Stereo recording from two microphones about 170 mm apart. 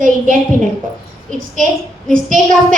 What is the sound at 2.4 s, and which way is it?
Speech, 50° right (ahead or behind).